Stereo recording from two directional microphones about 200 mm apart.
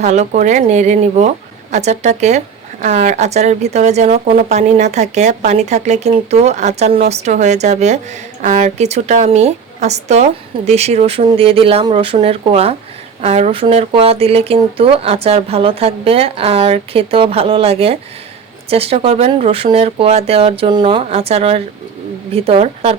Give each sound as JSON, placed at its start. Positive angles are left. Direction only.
{"t": 0.0, "sound": "a woman's voice", "side_deg": -35}